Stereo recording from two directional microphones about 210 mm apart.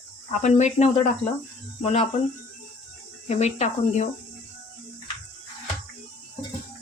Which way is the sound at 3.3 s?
30° left (ahead or behind).